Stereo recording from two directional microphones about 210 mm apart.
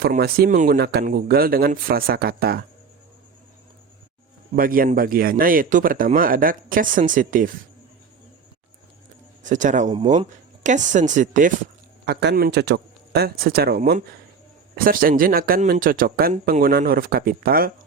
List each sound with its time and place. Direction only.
0.0 s speech: 45° right (ahead or behind)
4.5 s a man's voice: 40° right (ahead or behind)
9.4 s a man's voice: 35° right (ahead or behind)
9.9 s a man's voice: 25° right (ahead or behind)
12.0 s speech: 50° right (ahead or behind)